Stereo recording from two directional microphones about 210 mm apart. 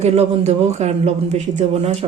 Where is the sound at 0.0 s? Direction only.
30° right (ahead or behind).